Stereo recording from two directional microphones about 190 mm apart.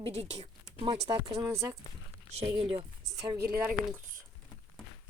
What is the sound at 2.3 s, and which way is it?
Speech, 30° right (ahead or behind).